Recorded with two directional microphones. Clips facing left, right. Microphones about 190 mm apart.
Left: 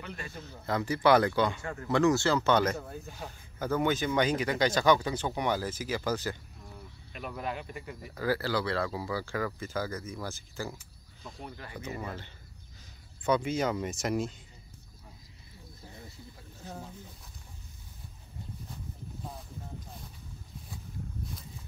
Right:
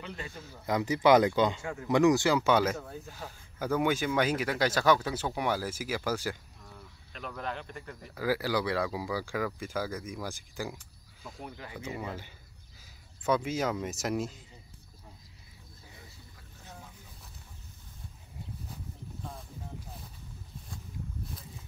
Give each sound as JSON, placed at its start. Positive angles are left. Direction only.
{"t": 0.0, "sound": "speech", "side_deg": -20}
{"t": 2.8, "sound": "speech", "side_deg": 5}
{"t": 3.3, "sound": "speech", "side_deg": -10}
{"t": 7.1, "sound": "speech", "side_deg": 10}
{"t": 8.1, "sound": "speech", "side_deg": -10}